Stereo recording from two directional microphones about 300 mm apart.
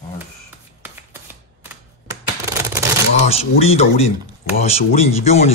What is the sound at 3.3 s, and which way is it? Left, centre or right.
Speech, centre.